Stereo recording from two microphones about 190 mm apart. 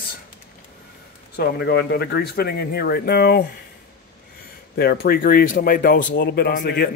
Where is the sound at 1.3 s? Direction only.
55° left (ahead or behind).